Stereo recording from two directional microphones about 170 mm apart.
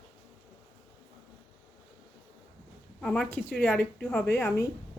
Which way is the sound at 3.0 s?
5° left (ahead or behind).